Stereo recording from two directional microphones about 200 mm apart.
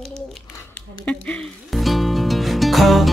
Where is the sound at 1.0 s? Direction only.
5° left (ahead or behind).